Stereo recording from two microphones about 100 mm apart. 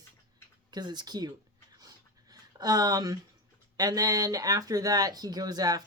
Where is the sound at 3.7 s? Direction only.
40° right (ahead or behind).